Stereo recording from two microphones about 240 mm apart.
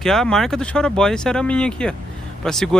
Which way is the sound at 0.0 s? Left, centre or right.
Centre.